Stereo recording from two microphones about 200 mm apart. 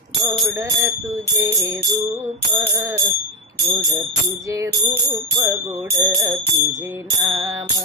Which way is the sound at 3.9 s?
15° right (ahead or behind).